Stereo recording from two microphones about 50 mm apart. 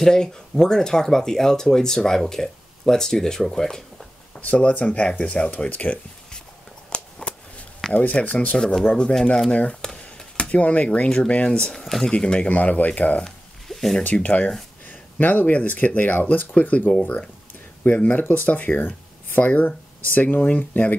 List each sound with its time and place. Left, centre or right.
0.0 s speech: centre
4.4 s speech: left
6.9 s a sound: centre
7.9 s speech: left
9.8 s a sound: centre
10.6 s speech: left
11.7 s speech: centre
12.1 s speech: centre
12.4 s speech: left
13.7 s a sound: centre
14.0 s speech: left
14.9 s speech: left